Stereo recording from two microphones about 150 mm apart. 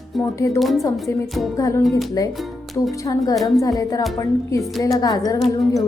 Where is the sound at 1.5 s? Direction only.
20° left (ahead or behind).